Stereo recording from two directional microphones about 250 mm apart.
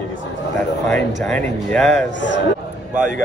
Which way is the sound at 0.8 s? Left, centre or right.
Centre.